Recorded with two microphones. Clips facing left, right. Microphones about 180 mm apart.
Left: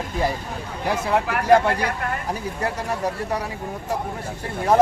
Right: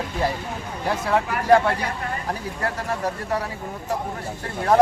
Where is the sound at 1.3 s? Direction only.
65° left (ahead or behind).